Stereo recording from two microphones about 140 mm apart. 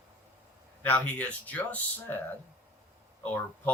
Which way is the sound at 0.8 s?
10° left (ahead or behind).